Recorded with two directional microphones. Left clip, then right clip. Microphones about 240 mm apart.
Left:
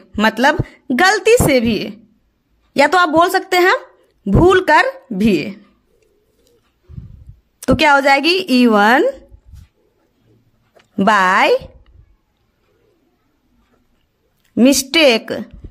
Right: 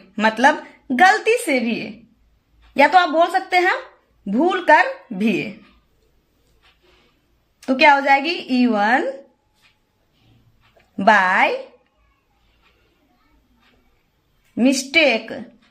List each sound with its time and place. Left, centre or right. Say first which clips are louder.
0.1 s a woman's voice: left 2 dB; left
7.6 s a woman's voice: left 2 dB; left
11.1 s a woman's voice: left 2 dB; left
14.5 s a woman's voice: left 4 dB; left